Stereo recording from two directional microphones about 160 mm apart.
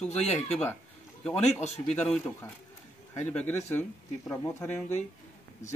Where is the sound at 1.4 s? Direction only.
45° left (ahead or behind).